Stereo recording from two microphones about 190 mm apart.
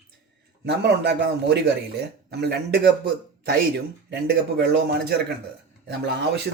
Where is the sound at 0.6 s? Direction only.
60° right (ahead or behind).